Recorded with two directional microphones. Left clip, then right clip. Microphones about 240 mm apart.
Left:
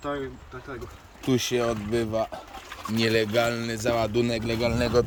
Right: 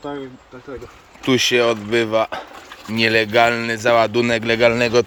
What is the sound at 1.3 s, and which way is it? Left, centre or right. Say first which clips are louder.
Speech: right 10 dB; centre.